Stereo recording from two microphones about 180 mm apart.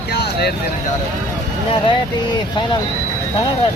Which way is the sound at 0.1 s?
60° left (ahead or behind).